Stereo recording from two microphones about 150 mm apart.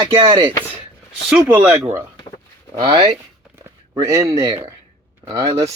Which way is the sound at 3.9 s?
20° right (ahead or behind).